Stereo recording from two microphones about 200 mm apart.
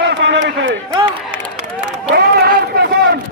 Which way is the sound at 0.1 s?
65° right (ahead or behind).